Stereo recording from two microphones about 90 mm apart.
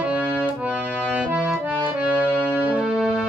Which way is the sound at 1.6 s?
15° right (ahead or behind).